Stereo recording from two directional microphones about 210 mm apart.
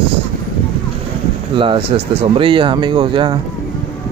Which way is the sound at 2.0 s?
25° right (ahead or behind).